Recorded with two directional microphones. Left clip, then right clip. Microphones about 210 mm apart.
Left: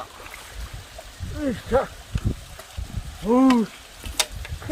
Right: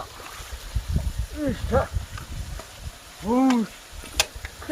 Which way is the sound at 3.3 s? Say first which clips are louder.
Left 3 dB; 45° left (ahead or behind).